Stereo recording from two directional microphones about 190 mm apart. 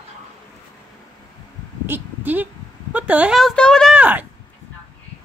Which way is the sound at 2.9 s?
10° right (ahead or behind).